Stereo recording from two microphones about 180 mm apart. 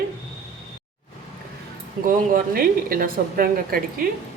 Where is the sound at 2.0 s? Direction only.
50° right (ahead or behind).